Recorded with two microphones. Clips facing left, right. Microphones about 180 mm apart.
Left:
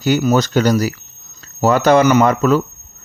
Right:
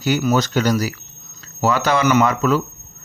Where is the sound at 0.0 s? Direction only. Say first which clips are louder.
Left 3 dB; 45° left (ahead or behind).